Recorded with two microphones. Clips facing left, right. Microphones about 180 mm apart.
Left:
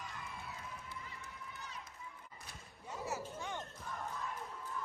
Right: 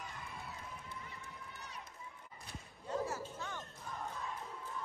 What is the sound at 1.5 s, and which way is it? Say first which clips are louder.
Run: left 1 dB; 65° right (ahead or behind).